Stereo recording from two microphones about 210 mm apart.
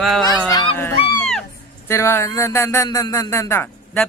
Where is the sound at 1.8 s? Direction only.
15° left (ahead or behind).